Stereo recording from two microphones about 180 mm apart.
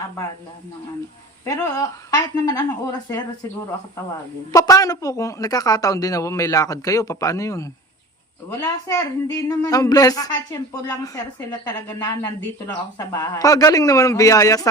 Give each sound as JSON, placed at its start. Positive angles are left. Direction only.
{"t": 1.5, "sound": "speech", "side_deg": 20}
{"t": 4.5, "sound": "speech", "side_deg": 20}